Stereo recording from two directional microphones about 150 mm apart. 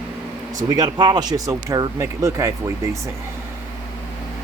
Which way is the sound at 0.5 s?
25° right (ahead or behind).